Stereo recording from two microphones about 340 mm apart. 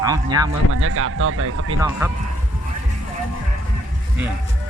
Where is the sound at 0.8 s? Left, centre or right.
Right.